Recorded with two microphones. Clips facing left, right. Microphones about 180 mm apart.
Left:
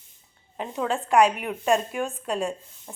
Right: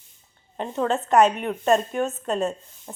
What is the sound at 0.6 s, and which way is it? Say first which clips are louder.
A woman's voice: right 3 dB; 5° left (ahead or behind).